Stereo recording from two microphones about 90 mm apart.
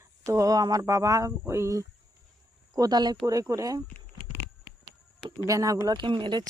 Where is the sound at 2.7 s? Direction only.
50° right (ahead or behind).